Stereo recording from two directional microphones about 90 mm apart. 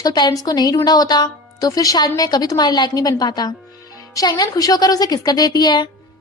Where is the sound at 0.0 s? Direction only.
50° left (ahead or behind).